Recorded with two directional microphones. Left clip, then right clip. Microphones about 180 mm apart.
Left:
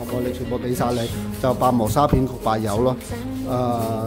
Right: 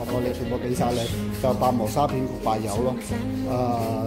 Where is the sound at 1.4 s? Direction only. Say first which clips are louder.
Left 3 dB; 30° left (ahead or behind).